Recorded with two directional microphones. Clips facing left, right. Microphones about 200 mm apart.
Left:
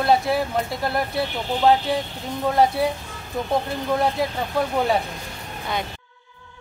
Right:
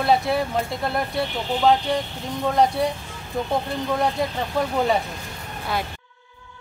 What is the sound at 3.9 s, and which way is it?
Speech, 5° left (ahead or behind).